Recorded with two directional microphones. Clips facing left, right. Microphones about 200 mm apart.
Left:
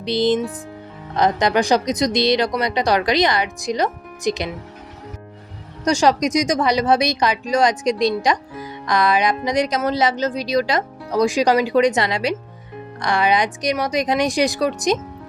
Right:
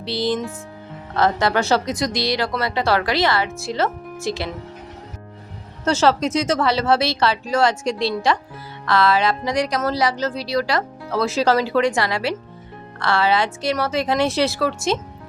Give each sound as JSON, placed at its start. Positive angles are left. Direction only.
{"t": 0.0, "sound": "a woman's voice", "side_deg": 20}
{"t": 5.8, "sound": "a woman's voice", "side_deg": 15}